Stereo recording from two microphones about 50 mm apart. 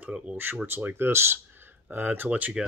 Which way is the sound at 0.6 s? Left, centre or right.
Right.